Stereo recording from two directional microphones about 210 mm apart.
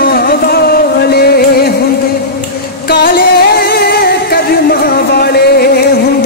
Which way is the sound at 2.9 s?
45° left (ahead or behind).